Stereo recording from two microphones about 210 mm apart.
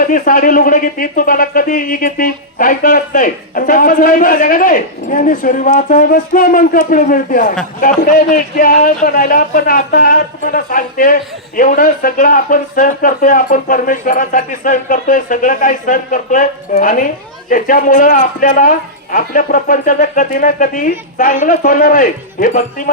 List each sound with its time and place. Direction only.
0.0 s speech: 40° left (ahead or behind)